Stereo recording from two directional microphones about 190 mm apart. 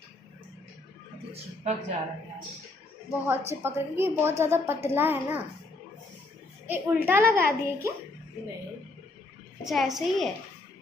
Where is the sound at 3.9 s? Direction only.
10° right (ahead or behind).